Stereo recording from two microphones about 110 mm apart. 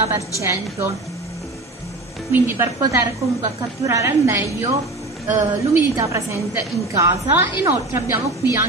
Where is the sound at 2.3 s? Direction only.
20° right (ahead or behind).